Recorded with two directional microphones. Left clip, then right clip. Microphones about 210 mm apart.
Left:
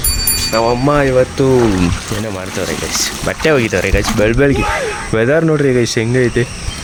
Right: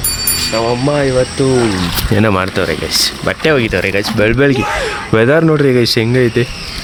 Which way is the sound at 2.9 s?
15° right (ahead or behind).